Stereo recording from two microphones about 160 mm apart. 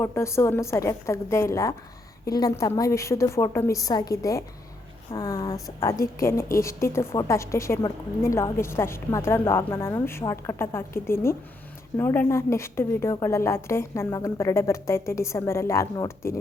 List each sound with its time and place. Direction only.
0.0 s a woman's voice: 15° left (ahead or behind)